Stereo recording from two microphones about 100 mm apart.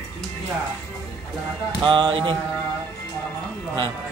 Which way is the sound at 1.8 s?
50° right (ahead or behind).